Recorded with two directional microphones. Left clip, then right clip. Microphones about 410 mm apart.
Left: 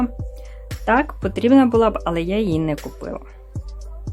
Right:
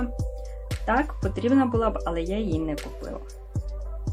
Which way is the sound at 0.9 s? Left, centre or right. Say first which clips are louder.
Left 7 dB; left.